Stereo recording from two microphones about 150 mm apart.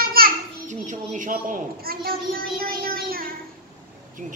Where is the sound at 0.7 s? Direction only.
55° right (ahead or behind); by 3.3 s 80° right.